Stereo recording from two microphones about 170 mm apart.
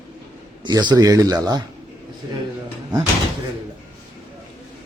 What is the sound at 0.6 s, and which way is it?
Speech, 25° right (ahead or behind).